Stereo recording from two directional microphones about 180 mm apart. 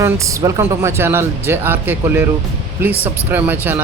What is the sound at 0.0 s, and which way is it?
Speech, 15° right (ahead or behind).